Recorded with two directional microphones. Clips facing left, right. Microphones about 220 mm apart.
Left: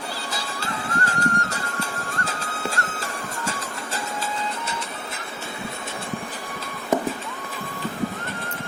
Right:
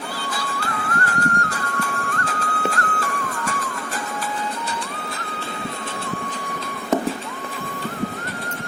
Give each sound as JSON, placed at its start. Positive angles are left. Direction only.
{"t": 0.3, "sound": "music", "side_deg": 25}